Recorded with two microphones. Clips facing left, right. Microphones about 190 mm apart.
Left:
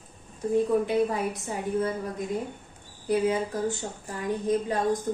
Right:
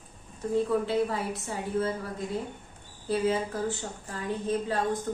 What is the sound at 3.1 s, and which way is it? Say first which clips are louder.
A woman's voice: left 2 dB; 15° left (ahead or behind).